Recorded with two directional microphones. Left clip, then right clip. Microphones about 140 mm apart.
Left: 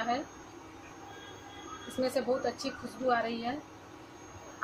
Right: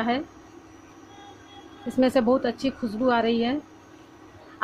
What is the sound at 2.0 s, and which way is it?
Speech, 50° right (ahead or behind).